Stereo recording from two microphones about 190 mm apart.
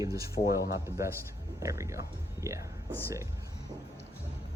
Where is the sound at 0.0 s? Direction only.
15° right (ahead or behind).